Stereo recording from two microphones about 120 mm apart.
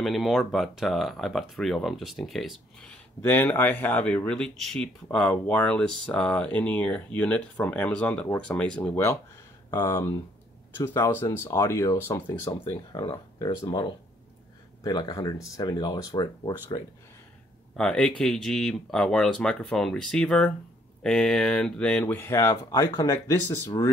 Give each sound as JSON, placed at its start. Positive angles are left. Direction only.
{"t": 0.0, "sound": "speech", "side_deg": 0}
{"t": 3.2, "sound": "speech", "side_deg": 15}
{"t": 17.7, "sound": "speech", "side_deg": 5}
{"t": 22.0, "sound": "speech", "side_deg": 20}